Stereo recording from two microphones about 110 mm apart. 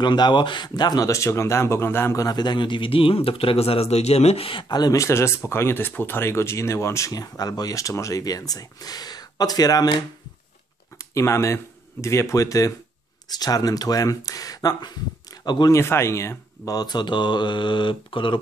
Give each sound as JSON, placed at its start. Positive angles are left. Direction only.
{"t": 0.0, "sound": "speech", "side_deg": 45}
{"t": 2.2, "sound": "speech", "side_deg": 40}
{"t": 4.7, "sound": "speech", "side_deg": 35}
{"t": 11.0, "sound": "speech", "side_deg": 25}
{"t": 15.7, "sound": "speech", "side_deg": 25}